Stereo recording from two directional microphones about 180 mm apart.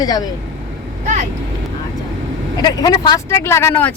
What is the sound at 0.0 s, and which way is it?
Speech, 20° left (ahead or behind).